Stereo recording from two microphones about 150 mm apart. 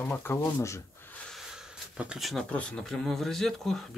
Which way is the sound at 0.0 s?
15° left (ahead or behind).